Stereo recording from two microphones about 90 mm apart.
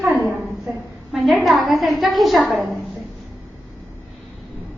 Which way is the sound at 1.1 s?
Centre (ahead or behind).